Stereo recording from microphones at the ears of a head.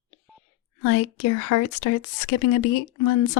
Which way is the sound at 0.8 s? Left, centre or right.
Left.